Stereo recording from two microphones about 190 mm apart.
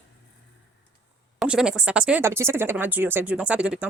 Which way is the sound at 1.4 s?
5° right (ahead or behind).